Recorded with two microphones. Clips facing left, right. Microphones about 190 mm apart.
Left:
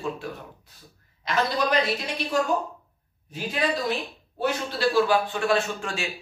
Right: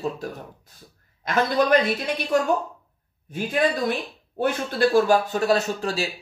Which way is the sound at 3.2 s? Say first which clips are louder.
Right 4 dB; 55° right (ahead or behind).